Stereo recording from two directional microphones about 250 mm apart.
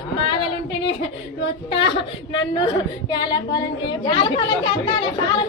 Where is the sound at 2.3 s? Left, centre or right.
Centre.